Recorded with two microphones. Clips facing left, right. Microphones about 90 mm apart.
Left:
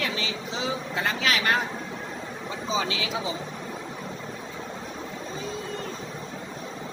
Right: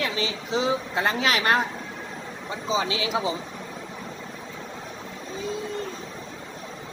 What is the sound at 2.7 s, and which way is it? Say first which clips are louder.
Speech: right 2 dB; 25° right (ahead or behind).